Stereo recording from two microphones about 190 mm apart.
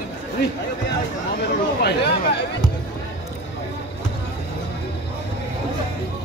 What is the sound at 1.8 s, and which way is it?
Chatter, 60° left (ahead or behind).